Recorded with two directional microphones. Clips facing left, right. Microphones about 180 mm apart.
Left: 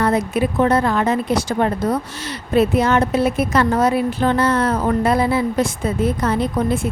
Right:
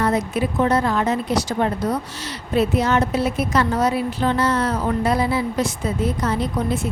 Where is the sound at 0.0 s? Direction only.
60° left (ahead or behind).